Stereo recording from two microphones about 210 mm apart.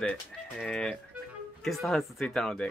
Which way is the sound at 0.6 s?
5° left (ahead or behind).